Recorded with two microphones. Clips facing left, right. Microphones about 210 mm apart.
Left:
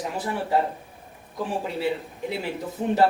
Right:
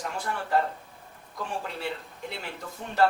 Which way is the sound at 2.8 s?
35° left (ahead or behind).